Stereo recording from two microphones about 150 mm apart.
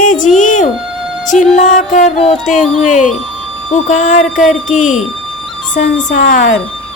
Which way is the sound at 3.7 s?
55° left (ahead or behind).